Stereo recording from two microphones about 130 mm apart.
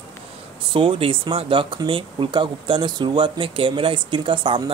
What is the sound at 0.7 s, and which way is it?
Speech, 45° right (ahead or behind).